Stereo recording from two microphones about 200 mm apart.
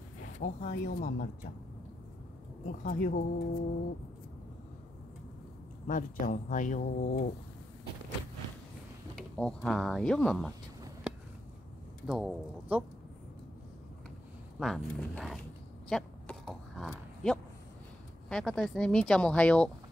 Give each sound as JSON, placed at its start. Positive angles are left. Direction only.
{"t": 0.4, "sound": "speech", "side_deg": 35}
{"t": 2.6, "sound": "speech", "side_deg": 45}
{"t": 5.9, "sound": "speech", "side_deg": 40}
{"t": 9.4, "sound": "speech", "side_deg": 5}
{"t": 12.1, "sound": "speech", "side_deg": 0}
{"t": 14.6, "sound": "speech", "side_deg": 0}
{"t": 15.9, "sound": "a sound", "side_deg": 0}
{"t": 18.3, "sound": "speech", "side_deg": 0}